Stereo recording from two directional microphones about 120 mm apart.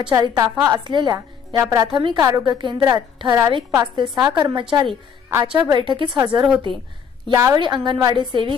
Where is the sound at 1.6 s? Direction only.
25° right (ahead or behind).